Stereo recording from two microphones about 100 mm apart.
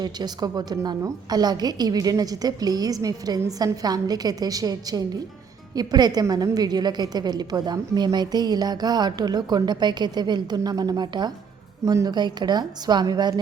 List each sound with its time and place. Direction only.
0.0 s a woman's voice: 45° right (ahead or behind)